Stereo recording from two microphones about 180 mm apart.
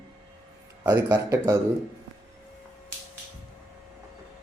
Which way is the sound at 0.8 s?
15° right (ahead or behind).